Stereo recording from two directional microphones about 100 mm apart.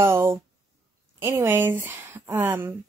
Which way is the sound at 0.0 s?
25° right (ahead or behind).